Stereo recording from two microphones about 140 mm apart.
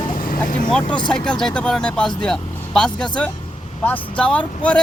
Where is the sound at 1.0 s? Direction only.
5° left (ahead or behind).